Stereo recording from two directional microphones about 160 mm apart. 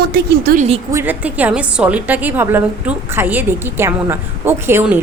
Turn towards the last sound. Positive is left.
turn(degrees=-15)  # may be behind; listen again after turning